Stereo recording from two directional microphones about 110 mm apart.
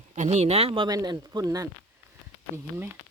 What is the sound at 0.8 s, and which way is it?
Speech, 40° right (ahead or behind).